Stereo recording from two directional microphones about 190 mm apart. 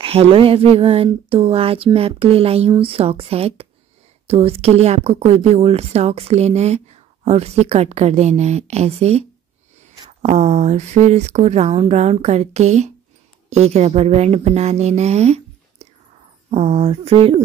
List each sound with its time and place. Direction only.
0.0 s a woman's voice: 30° right (ahead or behind)
10.2 s a woman's voice: 35° right (ahead or behind)